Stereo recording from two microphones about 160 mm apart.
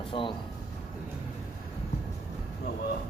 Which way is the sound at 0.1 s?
30° left (ahead or behind).